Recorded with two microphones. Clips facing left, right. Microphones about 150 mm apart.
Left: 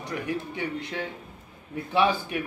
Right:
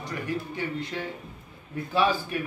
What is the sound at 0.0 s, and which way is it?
Speech, 15° left (ahead or behind).